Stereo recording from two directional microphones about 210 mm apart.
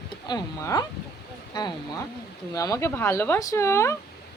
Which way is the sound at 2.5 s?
15° left (ahead or behind).